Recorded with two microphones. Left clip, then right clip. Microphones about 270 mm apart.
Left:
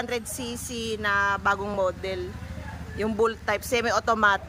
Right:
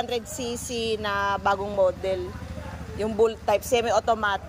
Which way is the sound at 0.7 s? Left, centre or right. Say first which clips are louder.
Left 1 dB; centre.